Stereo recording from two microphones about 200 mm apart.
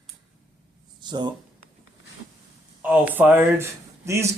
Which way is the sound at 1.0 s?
20° right (ahead or behind).